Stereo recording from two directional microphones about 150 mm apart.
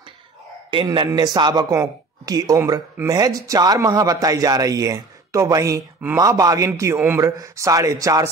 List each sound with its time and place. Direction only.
0.7 s a man's voice: 30° right (ahead or behind)